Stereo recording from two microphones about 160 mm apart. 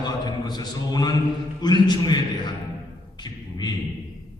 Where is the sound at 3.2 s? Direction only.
25° left (ahead or behind).